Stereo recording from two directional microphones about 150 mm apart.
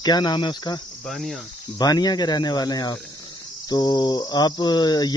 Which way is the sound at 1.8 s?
25° left (ahead or behind).